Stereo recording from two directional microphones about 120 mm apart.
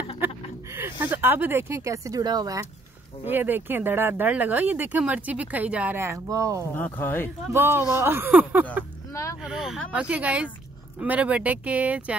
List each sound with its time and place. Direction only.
0.7 s speech: 20° right (ahead or behind)
3.3 s speech: 15° right (ahead or behind)
6.8 s speech: 15° left (ahead or behind)
7.5 s speech: 20° right (ahead or behind)
9.1 s a sound: 25° left (ahead or behind)
9.4 s speech: 5° right (ahead or behind)